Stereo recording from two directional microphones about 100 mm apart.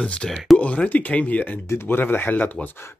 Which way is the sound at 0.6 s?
15° left (ahead or behind).